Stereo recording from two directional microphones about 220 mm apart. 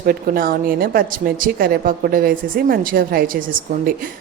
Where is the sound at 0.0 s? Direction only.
40° right (ahead or behind).